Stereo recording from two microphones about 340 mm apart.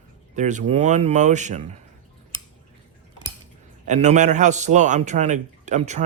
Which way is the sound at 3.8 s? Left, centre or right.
Right.